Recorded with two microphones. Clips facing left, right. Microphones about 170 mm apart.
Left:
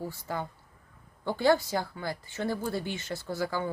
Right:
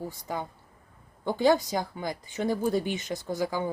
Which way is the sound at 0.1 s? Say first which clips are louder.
Right 1 dB; 15° right (ahead or behind).